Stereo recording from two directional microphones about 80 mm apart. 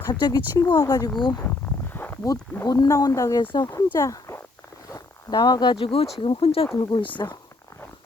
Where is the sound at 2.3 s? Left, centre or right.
Left.